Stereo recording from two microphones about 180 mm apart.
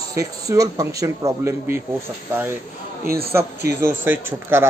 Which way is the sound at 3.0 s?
55° right (ahead or behind).